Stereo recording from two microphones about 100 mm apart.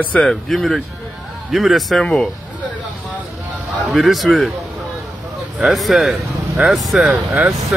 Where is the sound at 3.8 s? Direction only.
Centre (ahead or behind).